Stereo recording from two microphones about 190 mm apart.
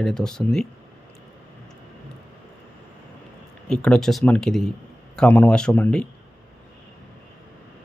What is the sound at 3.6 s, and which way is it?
Speech, 5° left (ahead or behind).